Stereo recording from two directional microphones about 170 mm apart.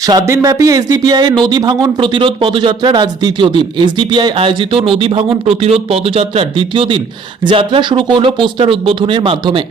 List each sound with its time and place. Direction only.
0.0 s speech: 20° right (ahead or behind)